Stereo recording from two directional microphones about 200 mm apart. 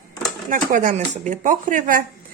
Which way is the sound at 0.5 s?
40° right (ahead or behind).